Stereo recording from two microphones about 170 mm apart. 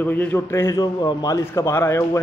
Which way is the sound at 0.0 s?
10° left (ahead or behind).